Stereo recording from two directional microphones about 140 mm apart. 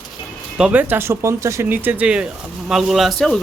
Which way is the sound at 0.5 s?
10° right (ahead or behind).